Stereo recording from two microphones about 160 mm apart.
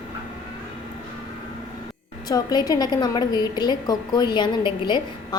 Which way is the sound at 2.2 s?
25° left (ahead or behind).